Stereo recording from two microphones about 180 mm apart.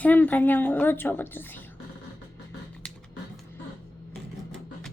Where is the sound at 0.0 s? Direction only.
10° left (ahead or behind).